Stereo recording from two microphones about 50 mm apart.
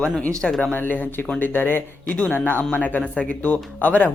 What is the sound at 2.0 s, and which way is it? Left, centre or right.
Speech, left.